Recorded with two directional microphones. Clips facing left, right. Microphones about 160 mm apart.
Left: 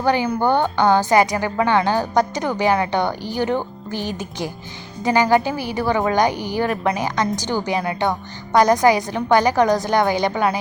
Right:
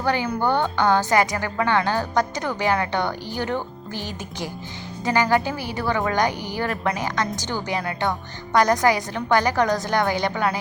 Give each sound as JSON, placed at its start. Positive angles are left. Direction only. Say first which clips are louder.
{"t": 0.0, "sound": "a woman's voice", "louder": "left 4 dB", "side_deg": 15}